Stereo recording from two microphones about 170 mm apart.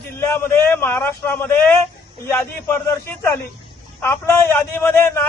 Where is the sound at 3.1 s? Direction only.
15° left (ahead or behind).